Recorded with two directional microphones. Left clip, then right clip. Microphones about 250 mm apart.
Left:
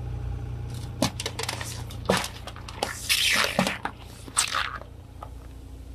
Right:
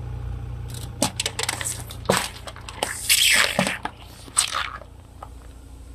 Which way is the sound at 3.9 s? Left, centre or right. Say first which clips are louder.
Right 2 dB; centre.